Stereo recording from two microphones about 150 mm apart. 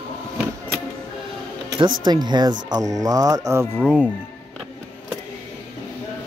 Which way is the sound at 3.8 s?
5° right (ahead or behind).